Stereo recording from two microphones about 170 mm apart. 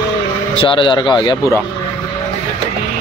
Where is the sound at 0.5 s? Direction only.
30° left (ahead or behind).